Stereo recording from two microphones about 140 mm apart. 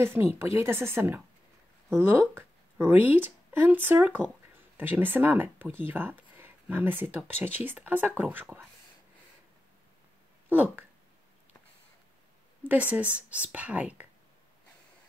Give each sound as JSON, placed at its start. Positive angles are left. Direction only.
{"t": 0.0, "sound": "speech", "side_deg": -15}
{"t": 10.5, "sound": "speech", "side_deg": -10}
{"t": 12.6, "sound": "speech", "side_deg": -10}